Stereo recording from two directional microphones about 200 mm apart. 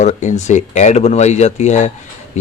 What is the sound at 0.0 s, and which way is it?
A man's voice, 35° left (ahead or behind).